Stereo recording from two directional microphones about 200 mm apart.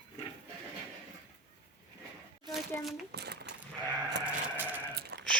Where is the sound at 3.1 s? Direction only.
55° right (ahead or behind).